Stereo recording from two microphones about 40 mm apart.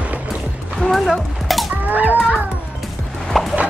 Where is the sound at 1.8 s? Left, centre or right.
Right.